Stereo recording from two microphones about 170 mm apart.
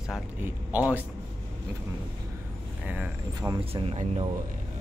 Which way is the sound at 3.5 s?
35° right (ahead or behind).